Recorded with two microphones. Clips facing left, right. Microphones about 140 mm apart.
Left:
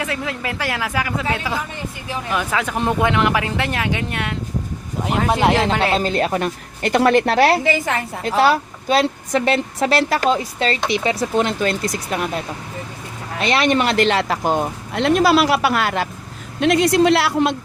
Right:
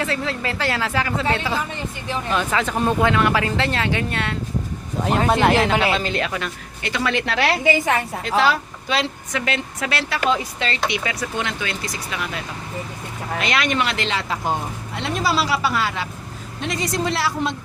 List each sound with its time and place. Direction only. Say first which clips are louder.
0.0 s a man's voice: right 1 dB; 10° left (ahead or behind)
5.8 s speech: left 3 dB; 40° left (ahead or behind)
13.4 s speech: left 5 dB; 30° left (ahead or behind); by 17.5 s 65° left (ahead or behind)